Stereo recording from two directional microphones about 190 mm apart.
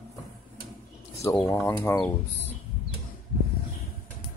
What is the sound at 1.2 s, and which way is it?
Speech, 10° left (ahead or behind).